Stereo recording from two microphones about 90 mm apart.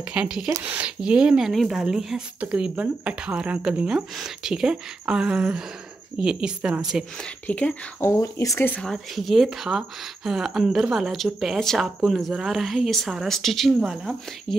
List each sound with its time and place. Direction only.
0.1 s speech: 10° right (ahead or behind)
7.4 s speech: 15° left (ahead or behind)
8.1 s speech: 35° left (ahead or behind)
8.5 s speech: 20° left (ahead or behind)
8.8 s speech: centre (ahead or behind)